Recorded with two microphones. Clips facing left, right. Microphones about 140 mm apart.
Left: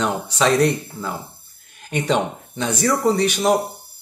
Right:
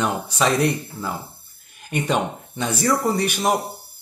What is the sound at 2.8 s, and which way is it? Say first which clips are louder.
Speech: left 3 dB; centre (ahead or behind).